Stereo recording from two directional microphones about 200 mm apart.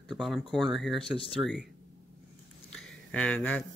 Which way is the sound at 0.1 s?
Centre (ahead or behind).